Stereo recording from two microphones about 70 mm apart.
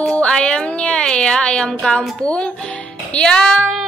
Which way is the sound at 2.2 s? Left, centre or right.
Centre.